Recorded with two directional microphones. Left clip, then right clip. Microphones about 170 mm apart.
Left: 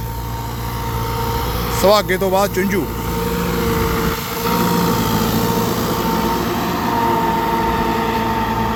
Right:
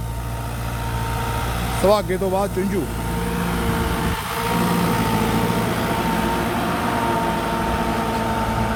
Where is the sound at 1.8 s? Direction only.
Centre (ahead or behind).